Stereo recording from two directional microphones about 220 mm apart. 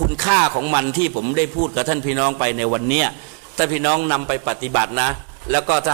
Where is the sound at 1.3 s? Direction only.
15° right (ahead or behind).